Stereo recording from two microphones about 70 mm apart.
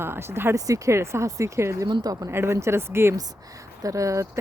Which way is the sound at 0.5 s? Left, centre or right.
Right.